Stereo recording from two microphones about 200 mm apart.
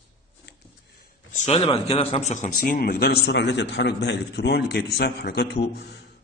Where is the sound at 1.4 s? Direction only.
30° left (ahead or behind).